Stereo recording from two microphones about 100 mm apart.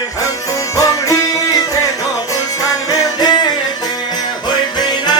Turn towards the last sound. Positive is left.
turn(degrees=45)  # may be behind; listen again after turning